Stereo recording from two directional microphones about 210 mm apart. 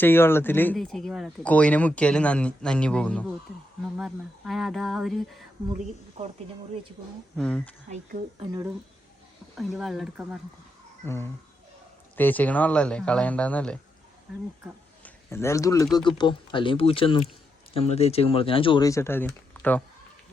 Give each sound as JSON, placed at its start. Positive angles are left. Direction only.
{"t": 0.0, "sound": "speech", "side_deg": 10}
{"t": 7.3, "sound": "speech", "side_deg": 5}
{"t": 7.9, "sound": "speech", "side_deg": -30}
{"t": 9.6, "sound": "speech", "side_deg": 0}
{"t": 11.0, "sound": "speech", "side_deg": 10}
{"t": 15.0, "sound": "speech", "side_deg": 10}